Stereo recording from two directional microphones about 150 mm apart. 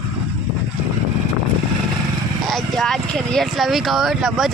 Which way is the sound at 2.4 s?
Centre (ahead or behind).